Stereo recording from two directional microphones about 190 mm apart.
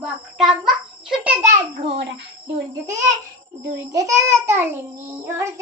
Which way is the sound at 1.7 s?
30° right (ahead or behind).